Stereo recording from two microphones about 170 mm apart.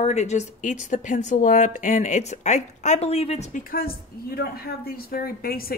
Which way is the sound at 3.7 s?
60° left (ahead or behind).